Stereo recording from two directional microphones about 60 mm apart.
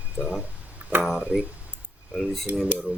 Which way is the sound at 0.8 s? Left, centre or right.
Right.